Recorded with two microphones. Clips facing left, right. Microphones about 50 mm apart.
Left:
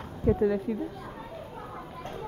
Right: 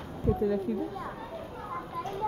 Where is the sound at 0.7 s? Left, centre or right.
Left.